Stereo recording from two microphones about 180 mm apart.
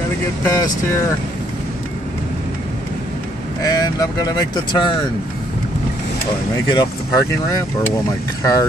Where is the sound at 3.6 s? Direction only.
20° left (ahead or behind).